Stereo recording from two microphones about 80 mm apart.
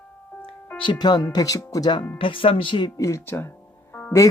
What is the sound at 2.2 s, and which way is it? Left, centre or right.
Speech, left.